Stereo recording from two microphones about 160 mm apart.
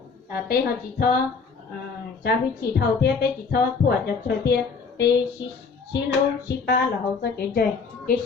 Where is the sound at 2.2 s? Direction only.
80° left.